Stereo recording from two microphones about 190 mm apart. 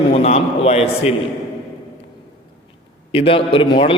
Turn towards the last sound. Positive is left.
turn(degrees=25)  # may be behind; listen again after turning